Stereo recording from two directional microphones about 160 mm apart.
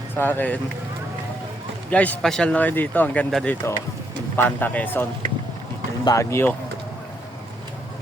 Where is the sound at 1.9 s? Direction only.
10° left (ahead or behind).